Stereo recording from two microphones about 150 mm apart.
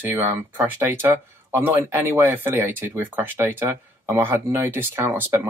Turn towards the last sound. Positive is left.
turn(degrees=-15)  # may be behind; listen again after turning